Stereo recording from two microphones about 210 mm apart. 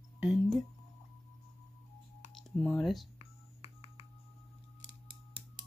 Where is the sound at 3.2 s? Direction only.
30° left (ahead or behind).